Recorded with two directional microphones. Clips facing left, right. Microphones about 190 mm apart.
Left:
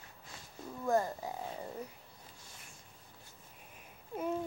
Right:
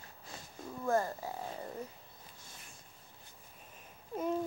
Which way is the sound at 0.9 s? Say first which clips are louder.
Left 1 dB; 15° left (ahead or behind).